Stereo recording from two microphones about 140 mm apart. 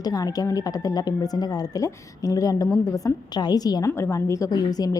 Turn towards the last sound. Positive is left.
turn(degrees=25)  # may be behind; listen again after turning